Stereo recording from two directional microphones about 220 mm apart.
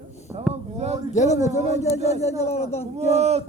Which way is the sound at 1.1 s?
30° left (ahead or behind).